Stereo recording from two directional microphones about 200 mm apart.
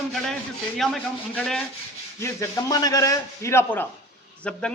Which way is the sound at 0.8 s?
Centre (ahead or behind).